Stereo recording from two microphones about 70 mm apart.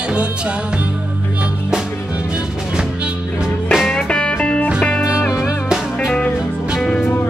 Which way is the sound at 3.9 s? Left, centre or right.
Centre.